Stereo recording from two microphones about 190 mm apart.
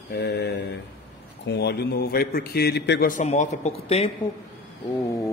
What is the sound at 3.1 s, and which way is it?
Speech, 40° left (ahead or behind).